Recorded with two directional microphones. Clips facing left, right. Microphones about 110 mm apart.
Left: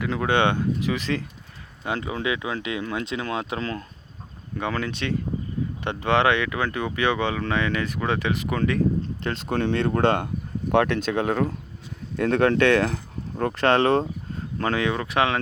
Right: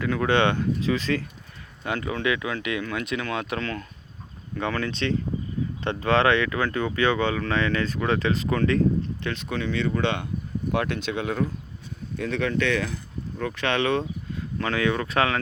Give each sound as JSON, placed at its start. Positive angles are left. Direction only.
{"t": 0.0, "sound": "speech", "side_deg": 20}
{"t": 3.6, "sound": "speech", "side_deg": 30}
{"t": 4.5, "sound": "speech", "side_deg": 15}
{"t": 9.5, "sound": "speech", "side_deg": 50}
{"t": 14.7, "sound": "speech", "side_deg": 20}